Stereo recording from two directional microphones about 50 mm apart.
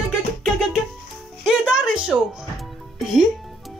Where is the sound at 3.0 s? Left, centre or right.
Centre.